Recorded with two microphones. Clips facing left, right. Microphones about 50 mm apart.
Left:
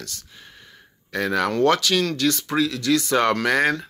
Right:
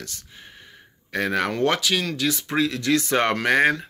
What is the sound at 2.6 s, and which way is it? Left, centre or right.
Speech, right.